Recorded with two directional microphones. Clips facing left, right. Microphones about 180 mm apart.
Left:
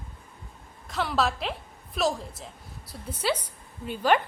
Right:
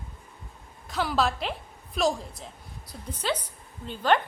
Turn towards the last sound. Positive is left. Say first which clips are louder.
# left 1 dB
turn(degrees=10)  # may be behind; listen again after turning